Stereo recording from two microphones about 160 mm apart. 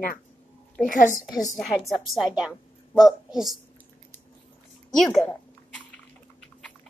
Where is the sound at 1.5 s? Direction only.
Centre (ahead or behind).